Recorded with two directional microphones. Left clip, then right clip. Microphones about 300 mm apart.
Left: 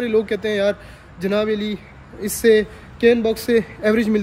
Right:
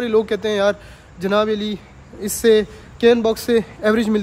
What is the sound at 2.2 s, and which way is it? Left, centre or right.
A man's voice, centre.